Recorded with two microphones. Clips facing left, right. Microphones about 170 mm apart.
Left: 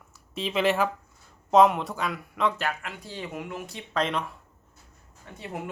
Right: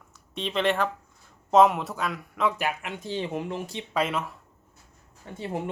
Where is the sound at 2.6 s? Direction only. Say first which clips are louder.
Right 2 dB; 15° right (ahead or behind).